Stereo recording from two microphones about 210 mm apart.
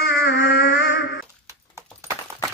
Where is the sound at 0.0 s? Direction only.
50° left (ahead or behind).